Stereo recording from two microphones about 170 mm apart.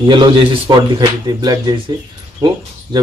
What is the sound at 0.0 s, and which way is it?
Speech, 25° right (ahead or behind).